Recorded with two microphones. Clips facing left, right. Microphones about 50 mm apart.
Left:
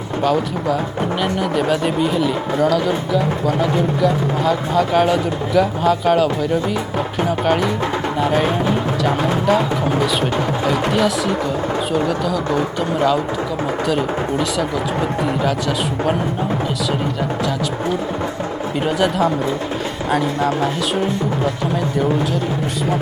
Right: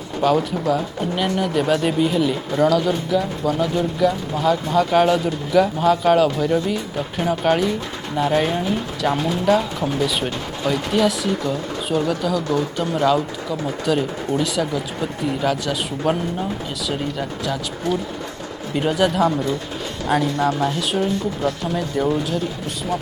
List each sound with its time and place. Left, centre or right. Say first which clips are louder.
0.2 s speech: even; centre
4.0 s speech: right 1 dB; centre
10.7 s speech: even; centre
12.5 s speech: left 2 dB; left
13.8 s speech: even; centre
18.8 s speech: even; centre